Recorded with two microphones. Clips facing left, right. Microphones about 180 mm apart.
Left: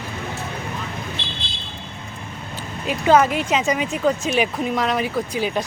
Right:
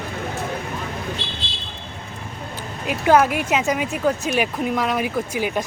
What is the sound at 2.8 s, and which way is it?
Speech, 5° right (ahead or behind).